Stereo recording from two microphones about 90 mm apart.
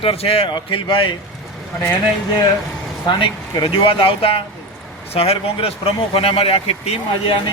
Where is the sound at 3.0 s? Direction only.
55° left (ahead or behind).